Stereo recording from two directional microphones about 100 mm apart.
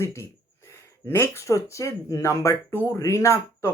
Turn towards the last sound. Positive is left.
turn(degrees=25)  # may be behind; listen again after turning